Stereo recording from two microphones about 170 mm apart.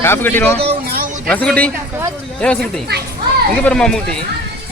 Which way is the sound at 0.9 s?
50° right (ahead or behind).